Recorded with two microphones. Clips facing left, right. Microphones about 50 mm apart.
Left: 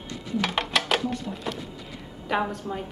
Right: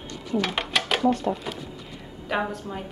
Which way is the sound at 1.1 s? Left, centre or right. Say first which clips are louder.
Right 9 dB; right.